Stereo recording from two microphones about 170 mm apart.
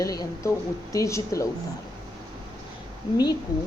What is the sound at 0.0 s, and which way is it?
A woman's voice, 20° left (ahead or behind).